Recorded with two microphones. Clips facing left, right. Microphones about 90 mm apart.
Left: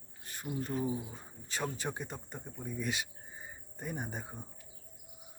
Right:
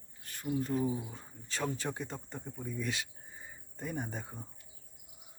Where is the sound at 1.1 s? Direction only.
10° left (ahead or behind).